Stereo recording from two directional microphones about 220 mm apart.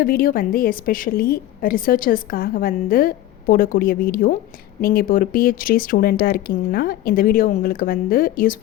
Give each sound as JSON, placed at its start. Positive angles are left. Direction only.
{"t": 0.0, "sound": "a woman's voice", "side_deg": 40}